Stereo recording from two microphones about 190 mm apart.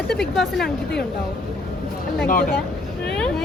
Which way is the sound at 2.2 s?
45° left (ahead or behind).